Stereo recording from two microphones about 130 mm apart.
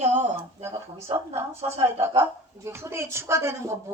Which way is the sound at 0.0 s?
65° right (ahead or behind).